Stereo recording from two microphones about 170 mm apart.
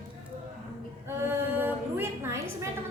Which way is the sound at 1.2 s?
10° right (ahead or behind).